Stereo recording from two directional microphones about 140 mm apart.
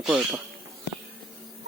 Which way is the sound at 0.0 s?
10° right (ahead or behind).